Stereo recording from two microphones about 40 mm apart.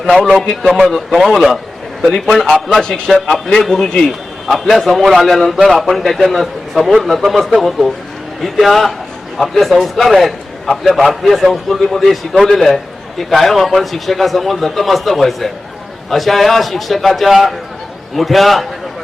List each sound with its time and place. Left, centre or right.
0.3 s a man's voice: centre
0.8 s a man's voice: centre
2.1 s a man's voice: centre
2.4 s a man's voice: centre